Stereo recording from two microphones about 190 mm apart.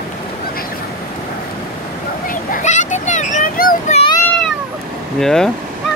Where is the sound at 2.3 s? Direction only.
45° left (ahead or behind).